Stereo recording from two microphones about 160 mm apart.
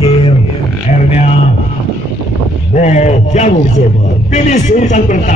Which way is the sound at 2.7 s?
45° left (ahead or behind).